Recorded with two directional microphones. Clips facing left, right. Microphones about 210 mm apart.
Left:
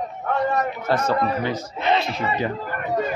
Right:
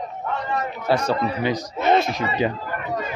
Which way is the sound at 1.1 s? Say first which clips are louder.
Even; 15° right (ahead or behind).